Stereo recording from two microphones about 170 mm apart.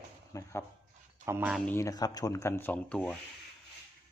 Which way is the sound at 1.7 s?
15° left (ahead or behind).